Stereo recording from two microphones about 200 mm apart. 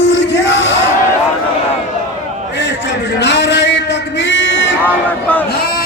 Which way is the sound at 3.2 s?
60° left (ahead or behind).